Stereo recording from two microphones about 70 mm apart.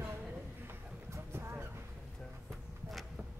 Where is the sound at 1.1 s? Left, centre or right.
Right.